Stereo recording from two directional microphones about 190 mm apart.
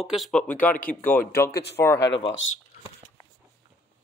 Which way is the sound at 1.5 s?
60° left (ahead or behind).